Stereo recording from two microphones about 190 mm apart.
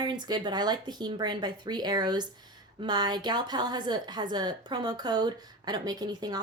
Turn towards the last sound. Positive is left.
turn(degrees=-20)  # may be behind; listen again after turning